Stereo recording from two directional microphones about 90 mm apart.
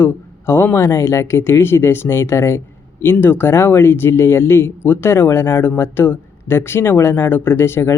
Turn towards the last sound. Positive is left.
turn(degrees=30)  # may be behind; listen again after turning